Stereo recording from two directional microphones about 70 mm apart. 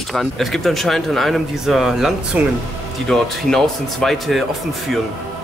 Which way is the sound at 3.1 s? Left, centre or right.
Centre.